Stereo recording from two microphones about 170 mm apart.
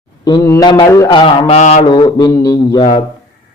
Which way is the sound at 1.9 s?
25° left (ahead or behind).